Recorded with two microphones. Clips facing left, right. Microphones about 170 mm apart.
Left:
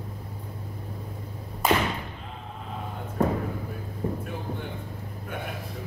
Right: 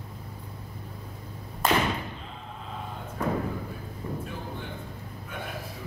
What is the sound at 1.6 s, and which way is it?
Thump, 10° left (ahead or behind).